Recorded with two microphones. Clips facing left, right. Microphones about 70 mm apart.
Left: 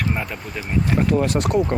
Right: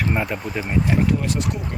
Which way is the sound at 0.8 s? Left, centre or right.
Left.